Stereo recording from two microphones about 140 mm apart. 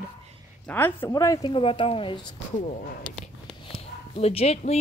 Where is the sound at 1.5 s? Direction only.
40° left (ahead or behind).